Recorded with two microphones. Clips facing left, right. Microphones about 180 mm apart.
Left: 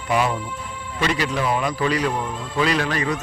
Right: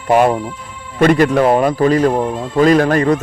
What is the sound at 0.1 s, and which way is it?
A man's voice, 50° right (ahead or behind).